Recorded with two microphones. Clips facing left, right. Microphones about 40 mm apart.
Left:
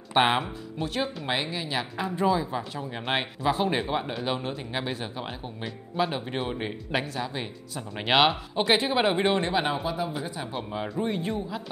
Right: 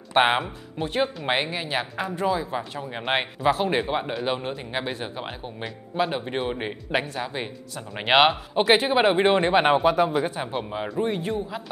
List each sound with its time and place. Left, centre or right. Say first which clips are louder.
0.1 s speech: right 2 dB; centre
9.5 s speech: right 7 dB; right
9.8 s speech: right 9 dB; right
10.5 s speech: right 3 dB; centre
11.0 s speech: right 3 dB; centre